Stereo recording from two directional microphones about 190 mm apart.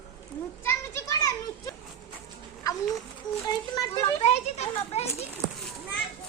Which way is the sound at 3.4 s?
20° left (ahead or behind).